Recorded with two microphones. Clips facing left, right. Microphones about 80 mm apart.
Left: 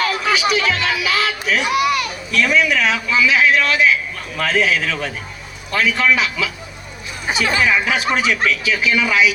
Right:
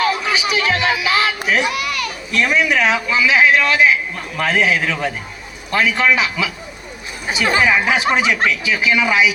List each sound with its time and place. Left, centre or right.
0.0 s music: centre
1.7 s a child's voice: centre
2.3 s a man's voice: right
7.3 s a man's voice: right